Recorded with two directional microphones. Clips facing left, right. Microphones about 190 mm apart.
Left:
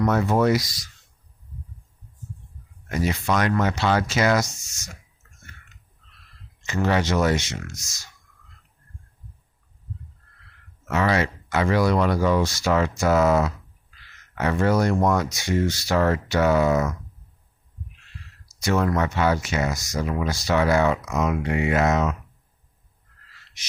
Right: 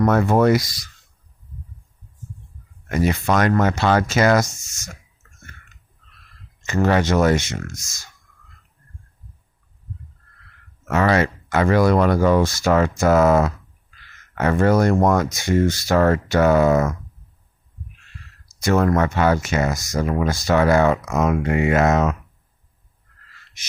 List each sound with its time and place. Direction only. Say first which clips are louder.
0.0 s speech: right 4 dB; 55° right (ahead or behind)
2.9 s speech: right 4 dB; 55° right (ahead or behind)
5.4 s burping: right 3 dB; 50° right (ahead or behind)
6.6 s speech: right 4 dB; 45° right (ahead or behind)
10.8 s speech: right 4 dB; 50° right (ahead or behind)
18.6 s speech: right 4 dB; 50° right (ahead or behind)